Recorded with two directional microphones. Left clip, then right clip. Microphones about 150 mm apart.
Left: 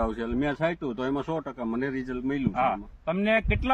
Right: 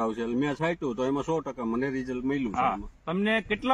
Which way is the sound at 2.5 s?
35° left (ahead or behind).